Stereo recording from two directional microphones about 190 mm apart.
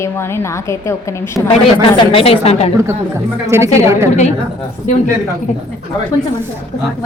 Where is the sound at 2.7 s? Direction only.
15° right (ahead or behind).